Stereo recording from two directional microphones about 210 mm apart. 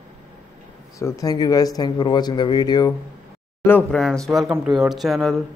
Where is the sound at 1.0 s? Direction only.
15° left (ahead or behind).